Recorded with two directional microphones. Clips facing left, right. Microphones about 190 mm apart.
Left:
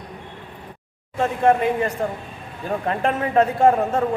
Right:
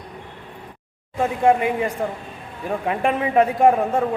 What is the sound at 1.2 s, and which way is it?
A man's voice, 15° right (ahead or behind).